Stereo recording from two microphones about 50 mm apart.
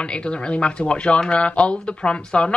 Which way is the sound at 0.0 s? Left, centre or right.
Left.